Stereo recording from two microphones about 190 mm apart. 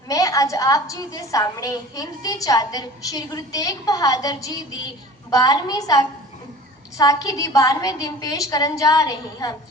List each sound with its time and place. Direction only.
0.1 s a woman's voice: 15° left (ahead or behind)